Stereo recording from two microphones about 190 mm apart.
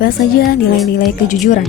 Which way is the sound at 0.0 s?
50° left (ahead or behind).